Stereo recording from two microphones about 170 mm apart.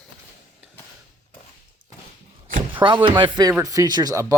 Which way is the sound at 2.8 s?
30° right (ahead or behind).